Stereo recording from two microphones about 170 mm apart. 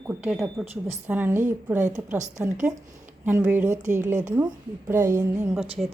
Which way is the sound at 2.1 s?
45° right (ahead or behind).